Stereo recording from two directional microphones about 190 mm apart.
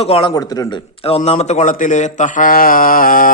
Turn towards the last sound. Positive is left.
turn(degrees=45)  # may be behind; listen again after turning